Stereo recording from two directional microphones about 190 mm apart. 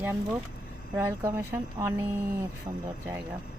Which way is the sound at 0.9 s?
15° right (ahead or behind).